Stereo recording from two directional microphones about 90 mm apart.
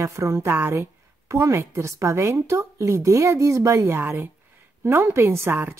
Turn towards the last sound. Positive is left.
turn(degrees=-25)  # may be behind; listen again after turning